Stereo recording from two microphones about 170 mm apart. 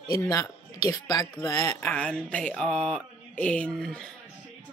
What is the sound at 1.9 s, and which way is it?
Speech, 5° left (ahead or behind).